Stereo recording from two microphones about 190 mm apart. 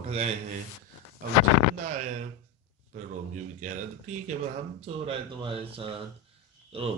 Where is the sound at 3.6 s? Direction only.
40° right (ahead or behind).